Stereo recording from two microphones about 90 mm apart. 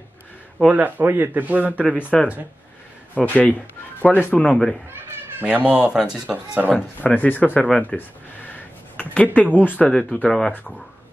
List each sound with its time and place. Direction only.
0.7 s a man's voice: 20° right (ahead or behind)
1.8 s speech: 20° left (ahead or behind)
5.4 s speech: 20° right (ahead or behind)
7.0 s speech: 20° left (ahead or behind)
8.5 s a sound: 15° left (ahead or behind)
9.8 s speech: 10° left (ahead or behind)